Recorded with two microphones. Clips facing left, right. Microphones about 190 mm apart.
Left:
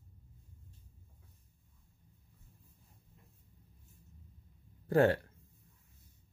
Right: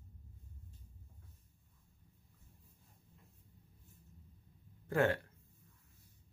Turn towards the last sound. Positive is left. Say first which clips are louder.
# left 5 dB
turn(degrees=35)  # may be behind; listen again after turning